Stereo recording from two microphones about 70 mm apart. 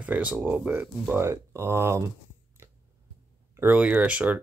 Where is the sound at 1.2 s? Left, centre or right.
Right.